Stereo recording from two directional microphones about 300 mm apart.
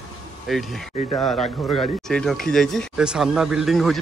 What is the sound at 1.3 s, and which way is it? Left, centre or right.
Speech, left.